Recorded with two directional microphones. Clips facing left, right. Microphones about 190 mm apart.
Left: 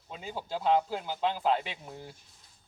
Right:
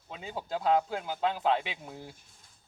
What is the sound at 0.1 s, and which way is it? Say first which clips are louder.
A man's voice: right 1 dB; centre (ahead or behind).